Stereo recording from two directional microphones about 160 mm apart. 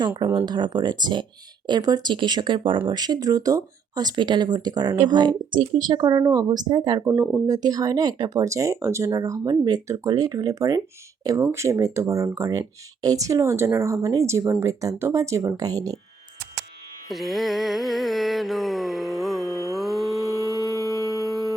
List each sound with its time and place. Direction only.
0.0 s speech: 25° right (ahead or behind)
17.1 s carnatic music: centre (ahead or behind)
20.5 s humming: 20° left (ahead or behind)